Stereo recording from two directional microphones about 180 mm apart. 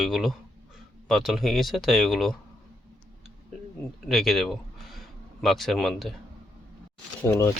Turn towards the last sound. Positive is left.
turn(degrees=15)  # may be behind; listen again after turning